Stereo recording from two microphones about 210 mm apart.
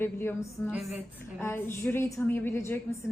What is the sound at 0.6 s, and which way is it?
Speech, 5° right (ahead or behind).